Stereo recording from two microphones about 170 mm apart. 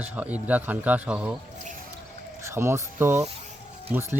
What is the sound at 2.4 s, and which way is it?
Speech, 15° right (ahead or behind).